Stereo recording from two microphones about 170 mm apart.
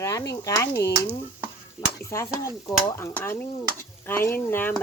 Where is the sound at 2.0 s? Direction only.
15° left (ahead or behind).